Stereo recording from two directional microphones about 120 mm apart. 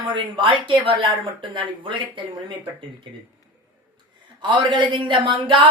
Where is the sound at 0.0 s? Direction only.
45° right (ahead or behind).